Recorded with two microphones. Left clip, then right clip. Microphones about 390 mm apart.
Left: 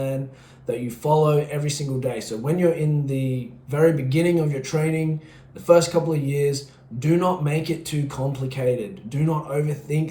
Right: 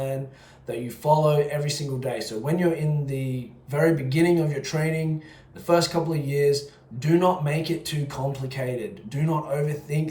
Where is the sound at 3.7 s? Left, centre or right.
Centre.